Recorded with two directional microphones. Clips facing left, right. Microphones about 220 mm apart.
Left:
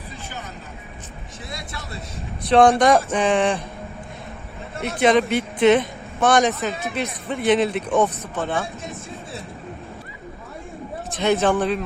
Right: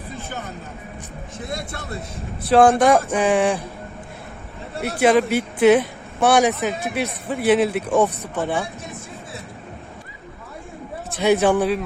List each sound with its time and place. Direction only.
1.4 s speech: 55° right (ahead or behind)
2.5 s speech: 5° right (ahead or behind)
4.8 s speech: 5° right (ahead or behind)
11.2 s speech: 10° right (ahead or behind)